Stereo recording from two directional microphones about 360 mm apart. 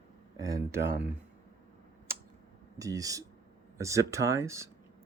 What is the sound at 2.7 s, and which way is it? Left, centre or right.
Speech, centre.